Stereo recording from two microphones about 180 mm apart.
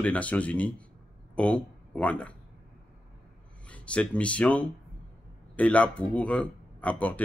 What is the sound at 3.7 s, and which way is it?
Speech, 5° left (ahead or behind).